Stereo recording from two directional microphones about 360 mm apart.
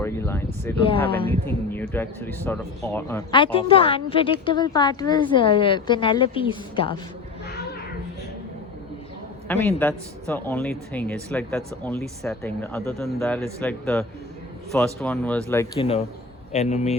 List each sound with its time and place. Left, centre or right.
0.0 s speech: centre
9.5 s speech: centre
15.0 s speech: centre